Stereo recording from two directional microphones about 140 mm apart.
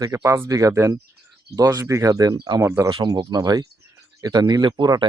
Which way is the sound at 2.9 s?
35° right (ahead or behind).